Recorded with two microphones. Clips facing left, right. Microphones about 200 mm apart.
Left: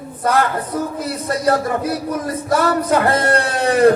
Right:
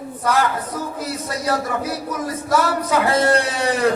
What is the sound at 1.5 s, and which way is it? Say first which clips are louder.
Speech: left 5 dB; 55° left (ahead or behind).